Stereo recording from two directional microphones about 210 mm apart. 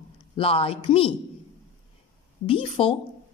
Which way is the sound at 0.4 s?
25° left (ahead or behind).